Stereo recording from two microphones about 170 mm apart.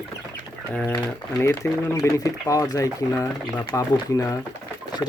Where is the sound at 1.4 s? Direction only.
15° left (ahead or behind).